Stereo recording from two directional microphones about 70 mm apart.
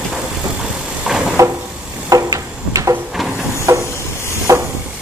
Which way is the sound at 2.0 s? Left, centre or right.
Right.